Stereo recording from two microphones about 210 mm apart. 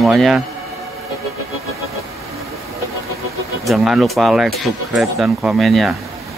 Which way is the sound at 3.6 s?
Centre (ahead or behind).